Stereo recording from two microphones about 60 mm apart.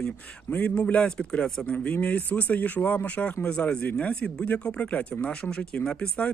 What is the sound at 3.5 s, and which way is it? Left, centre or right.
Speech, centre.